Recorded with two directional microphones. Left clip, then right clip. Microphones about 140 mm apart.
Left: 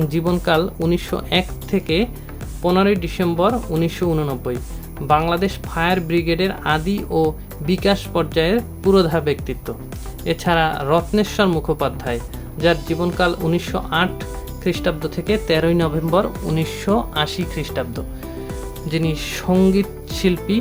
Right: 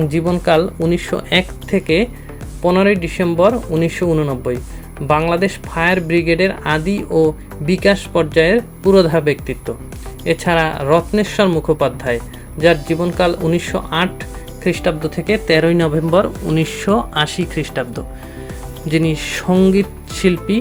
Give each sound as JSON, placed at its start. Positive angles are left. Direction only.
{"t": 0.1, "sound": "speech", "side_deg": -10}
{"t": 19.5, "sound": "speech", "side_deg": -5}